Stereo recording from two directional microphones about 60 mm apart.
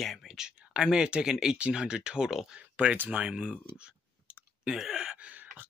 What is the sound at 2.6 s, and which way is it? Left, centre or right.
Speech, right.